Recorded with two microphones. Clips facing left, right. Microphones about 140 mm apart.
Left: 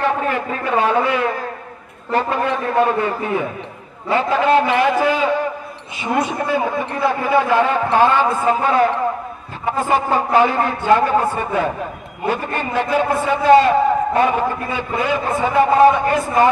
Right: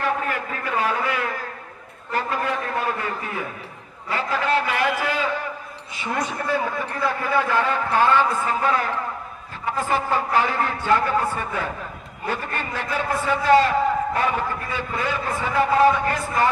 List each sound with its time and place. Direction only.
0.0 s a sound: 25° left (ahead or behind)
2.0 s a man's voice: 25° left (ahead or behind)
6.2 s a man's voice: 20° left (ahead or behind)